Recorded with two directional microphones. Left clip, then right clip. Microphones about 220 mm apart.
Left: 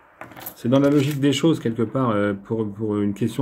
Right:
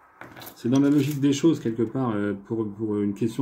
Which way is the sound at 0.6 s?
45° left (ahead or behind).